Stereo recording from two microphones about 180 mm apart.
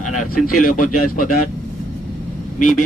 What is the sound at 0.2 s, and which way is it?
Speech, 45° left (ahead or behind).